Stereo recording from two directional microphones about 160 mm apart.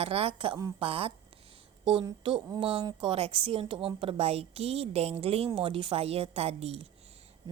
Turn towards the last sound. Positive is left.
turn(degrees=-40)  # may be behind; listen again after turning